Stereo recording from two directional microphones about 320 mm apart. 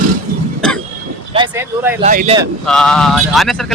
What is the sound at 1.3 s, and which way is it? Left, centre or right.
Vehicle, centre.